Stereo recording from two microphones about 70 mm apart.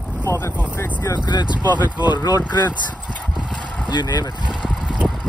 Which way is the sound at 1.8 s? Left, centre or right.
Left.